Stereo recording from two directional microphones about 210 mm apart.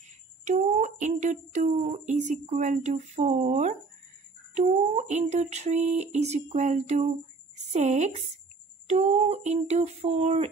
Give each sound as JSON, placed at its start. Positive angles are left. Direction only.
{"t": 0.5, "sound": "speech", "side_deg": -35}